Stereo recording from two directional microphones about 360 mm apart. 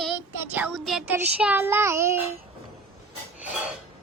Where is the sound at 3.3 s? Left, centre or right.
Centre.